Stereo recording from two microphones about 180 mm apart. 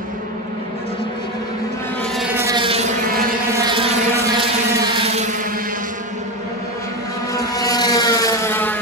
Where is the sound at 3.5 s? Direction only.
25° right (ahead or behind).